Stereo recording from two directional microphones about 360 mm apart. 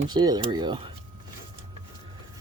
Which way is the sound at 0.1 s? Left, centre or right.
Centre.